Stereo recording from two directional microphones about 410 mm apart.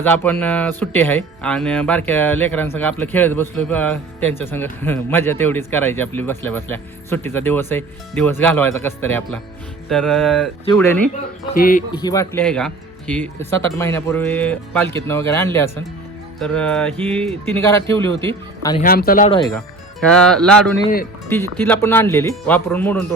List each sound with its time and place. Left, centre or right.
0.0 s a man's voice: centre
11.5 s speech: left
11.9 s a man's voice: centre
18.8 s a man's voice: left; by 23.0 s centre